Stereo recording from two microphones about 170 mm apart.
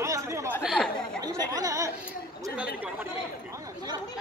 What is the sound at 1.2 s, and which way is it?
Speech, 20° right (ahead or behind).